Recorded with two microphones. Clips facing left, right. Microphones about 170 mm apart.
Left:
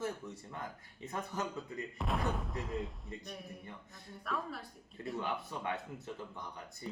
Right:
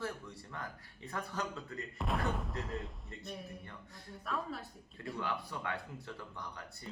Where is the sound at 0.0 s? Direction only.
20° left (ahead or behind).